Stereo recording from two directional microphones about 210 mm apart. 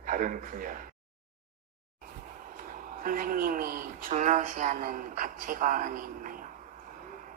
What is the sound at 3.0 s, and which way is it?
A man's voice, 40° right (ahead or behind).